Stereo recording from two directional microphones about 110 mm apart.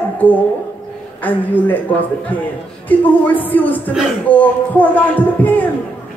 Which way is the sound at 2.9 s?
15° left (ahead or behind).